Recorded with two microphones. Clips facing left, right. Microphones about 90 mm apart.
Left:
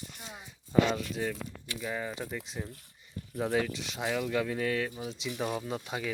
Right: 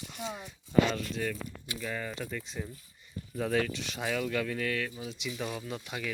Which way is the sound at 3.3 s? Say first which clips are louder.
Even; 15° left (ahead or behind).